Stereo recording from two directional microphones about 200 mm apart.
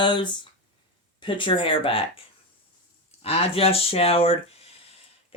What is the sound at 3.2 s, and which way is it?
Speech, 30° left (ahead or behind).